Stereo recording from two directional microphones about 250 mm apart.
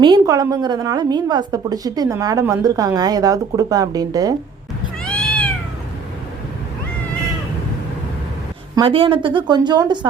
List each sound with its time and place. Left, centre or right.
0.0 s a woman's voice: centre
5.0 s cat: centre
8.7 s speech: centre